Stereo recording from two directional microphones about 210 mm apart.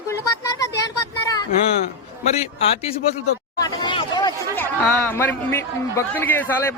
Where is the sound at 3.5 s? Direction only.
20° left (ahead or behind).